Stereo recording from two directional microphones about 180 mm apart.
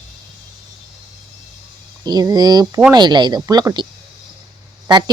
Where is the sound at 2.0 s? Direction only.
20° right (ahead or behind).